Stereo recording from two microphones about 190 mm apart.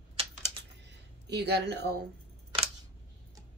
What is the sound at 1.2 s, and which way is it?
Speech, 60° right (ahead or behind).